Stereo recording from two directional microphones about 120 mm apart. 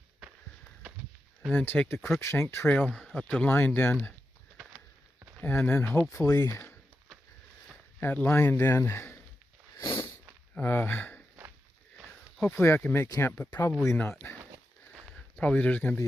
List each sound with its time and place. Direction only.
1.5 s speech: 10° left (ahead or behind)
2.0 s speech: centre (ahead or behind)
2.2 s speech: 20° left (ahead or behind)
2.9 s speech: 5° left (ahead or behind)
5.4 s speech: 15° left (ahead or behind)
6.1 s speech: 30° left (ahead or behind)
8.0 s speech: 15° left (ahead or behind)
9.7 s a sound: 35° left (ahead or behind)
10.6 s speech: 20° left (ahead or behind)
12.4 s speech: centre (ahead or behind)
12.6 s speech: 20° left (ahead or behind)
14.2 s a sound: 25° left (ahead or behind)
15.4 s speech: 10° left (ahead or behind)